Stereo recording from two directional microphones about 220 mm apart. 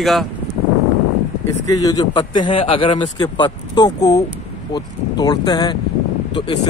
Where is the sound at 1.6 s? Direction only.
15° left (ahead or behind).